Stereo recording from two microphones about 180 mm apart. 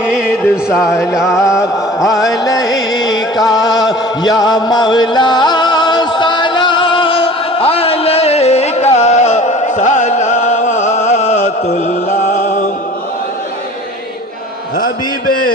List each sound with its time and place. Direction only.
0.0 s music: 5° right (ahead or behind)
2.2 s music: 20° left (ahead or behind)
3.6 s chant: 20° left (ahead or behind); by 12.6 s 45° left (ahead or behind)